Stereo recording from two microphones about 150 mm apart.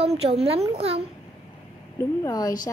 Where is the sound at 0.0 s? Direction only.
45° right (ahead or behind).